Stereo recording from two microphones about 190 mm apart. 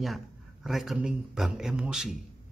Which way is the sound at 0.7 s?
Centre (ahead or behind).